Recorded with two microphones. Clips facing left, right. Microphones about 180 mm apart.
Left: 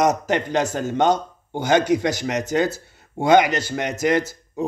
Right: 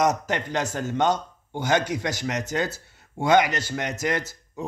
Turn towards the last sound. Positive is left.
turn(degrees=15)  # may be behind; listen again after turning